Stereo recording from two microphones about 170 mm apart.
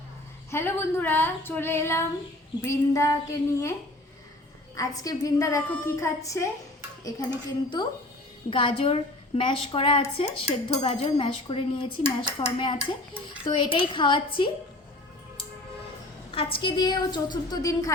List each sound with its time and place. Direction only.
0.5 s speech: 15° left (ahead or behind)
4.8 s a woman's voice: 20° left (ahead or behind)
16.3 s a woman's voice: 35° left (ahead or behind)